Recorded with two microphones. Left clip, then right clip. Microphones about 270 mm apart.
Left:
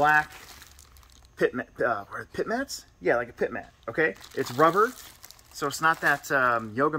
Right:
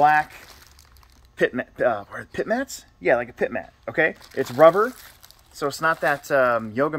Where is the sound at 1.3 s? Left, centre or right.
Right.